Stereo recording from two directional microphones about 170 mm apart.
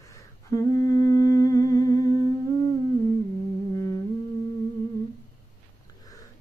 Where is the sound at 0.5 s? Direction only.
20° left (ahead or behind).